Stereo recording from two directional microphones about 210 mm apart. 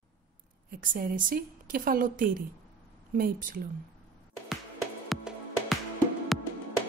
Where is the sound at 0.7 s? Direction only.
40° right (ahead or behind).